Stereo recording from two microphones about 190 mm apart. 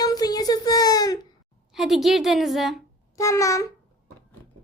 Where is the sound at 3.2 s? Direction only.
15° left (ahead or behind).